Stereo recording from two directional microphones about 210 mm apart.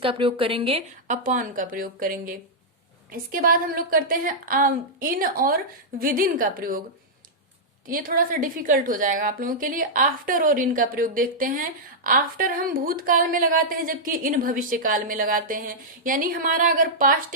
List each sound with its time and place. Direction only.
0.0 s a woman's voice: 25° right (ahead or behind); by 6.8 s 40° right (ahead or behind)
7.9 s a woman's voice: 40° right (ahead or behind)